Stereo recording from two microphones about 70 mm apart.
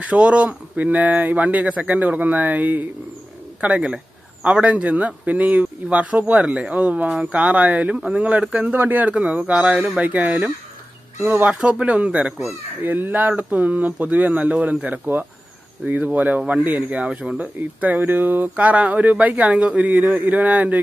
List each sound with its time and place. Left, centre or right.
0.0 s a man's voice: centre
4.4 s a man's voice: centre
11.5 s speech: centre
11.8 s a man's voice: centre
17.6 s a man's voice: right